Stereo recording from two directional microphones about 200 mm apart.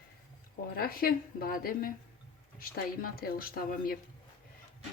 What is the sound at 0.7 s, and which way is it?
A woman's voice, 50° left (ahead or behind).